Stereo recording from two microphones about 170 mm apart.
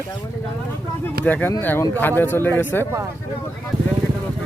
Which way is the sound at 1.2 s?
10° left (ahead or behind).